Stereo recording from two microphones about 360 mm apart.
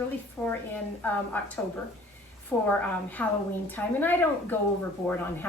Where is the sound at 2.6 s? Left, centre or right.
Centre.